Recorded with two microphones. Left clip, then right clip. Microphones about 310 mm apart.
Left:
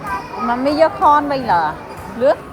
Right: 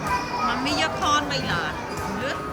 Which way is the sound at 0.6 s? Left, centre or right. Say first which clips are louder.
Left 11 dB; centre.